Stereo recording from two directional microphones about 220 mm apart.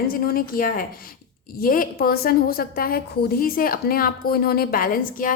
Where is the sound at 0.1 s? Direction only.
40° left (ahead or behind).